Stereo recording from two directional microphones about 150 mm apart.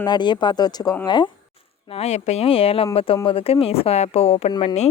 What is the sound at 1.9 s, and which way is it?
A woman's voice, 45° left (ahead or behind).